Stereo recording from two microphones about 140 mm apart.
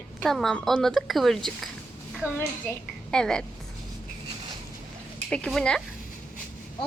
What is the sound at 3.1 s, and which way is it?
Speech, 5° left (ahead or behind).